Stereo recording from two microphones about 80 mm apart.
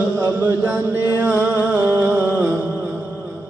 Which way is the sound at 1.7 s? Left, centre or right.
Right.